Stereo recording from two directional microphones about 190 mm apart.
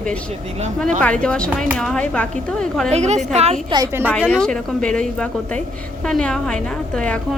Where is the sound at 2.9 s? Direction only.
35° right (ahead or behind).